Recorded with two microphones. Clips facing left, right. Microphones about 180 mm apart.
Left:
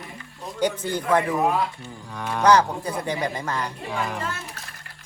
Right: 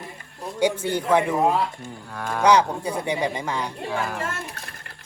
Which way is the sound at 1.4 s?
25° right (ahead or behind).